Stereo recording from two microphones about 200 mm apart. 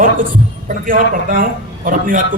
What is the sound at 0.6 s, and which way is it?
A man's voice, 45° right (ahead or behind).